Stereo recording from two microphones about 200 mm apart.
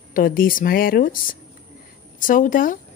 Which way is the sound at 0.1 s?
45° left (ahead or behind).